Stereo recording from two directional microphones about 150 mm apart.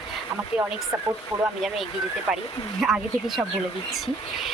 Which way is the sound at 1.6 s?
Centre (ahead or behind).